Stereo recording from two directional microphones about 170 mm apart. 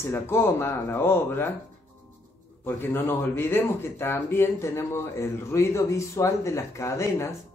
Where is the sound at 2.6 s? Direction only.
15° left (ahead or behind).